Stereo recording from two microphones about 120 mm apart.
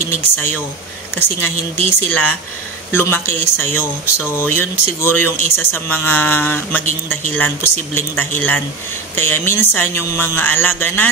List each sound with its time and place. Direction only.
0.0 s speech: 20° left (ahead or behind)